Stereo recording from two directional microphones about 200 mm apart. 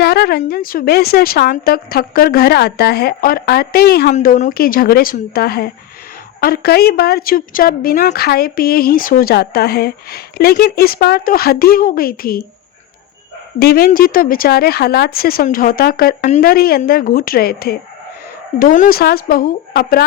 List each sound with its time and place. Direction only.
0.0 s a woman's voice: 55° left (ahead or behind)
4.1 s a woman's voice: 40° left (ahead or behind)
13.6 s a woman's voice: 50° left (ahead or behind)